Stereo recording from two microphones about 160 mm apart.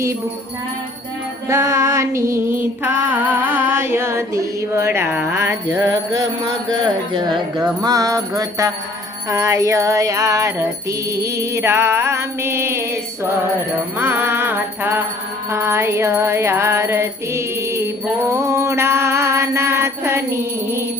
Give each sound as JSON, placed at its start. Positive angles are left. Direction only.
{"t": 1.5, "sound": "music", "side_deg": -15}
{"t": 6.1, "sound": "music", "side_deg": -25}
{"t": 14.0, "sound": "music", "side_deg": -15}